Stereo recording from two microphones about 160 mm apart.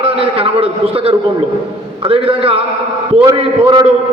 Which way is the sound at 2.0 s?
35° right (ahead or behind).